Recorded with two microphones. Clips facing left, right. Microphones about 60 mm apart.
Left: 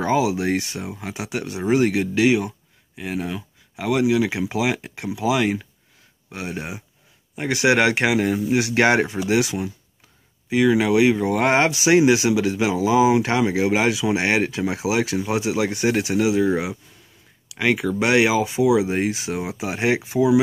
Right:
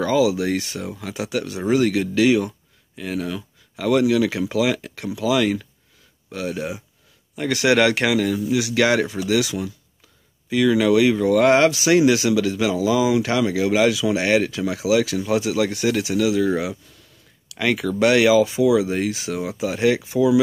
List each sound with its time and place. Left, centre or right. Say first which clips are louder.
0.0 s speech: right 2 dB; left
16.4 s speech: even; centre